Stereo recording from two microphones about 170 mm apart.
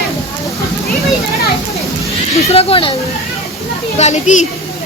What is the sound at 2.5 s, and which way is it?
Speech, 35° left (ahead or behind).